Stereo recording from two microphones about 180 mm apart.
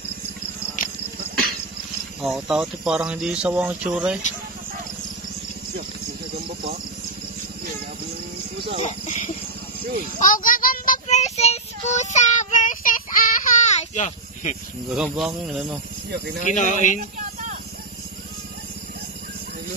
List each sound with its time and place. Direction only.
2.2 s speech: centre (ahead or behind)
8.7 s speech: 40° left (ahead or behind)
10.1 s child singing: 50° left (ahead or behind)
14.9 s speech: centre (ahead or behind)
16.1 s speech: 65° right (ahead or behind)
16.5 s speech: 45° left (ahead or behind)